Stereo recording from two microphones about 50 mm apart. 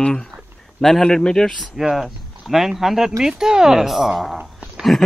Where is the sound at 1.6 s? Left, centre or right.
Centre.